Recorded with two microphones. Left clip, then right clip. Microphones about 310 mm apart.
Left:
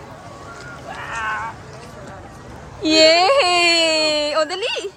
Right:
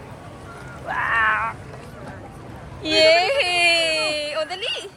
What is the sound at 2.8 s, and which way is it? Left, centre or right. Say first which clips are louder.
Whimper: left 3 dB; left.